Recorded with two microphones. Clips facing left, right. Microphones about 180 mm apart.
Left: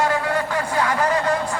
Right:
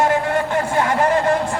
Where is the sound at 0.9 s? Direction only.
50° right (ahead or behind).